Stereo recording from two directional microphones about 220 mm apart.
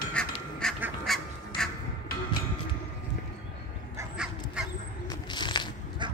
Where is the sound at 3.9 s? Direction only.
5° right (ahead or behind).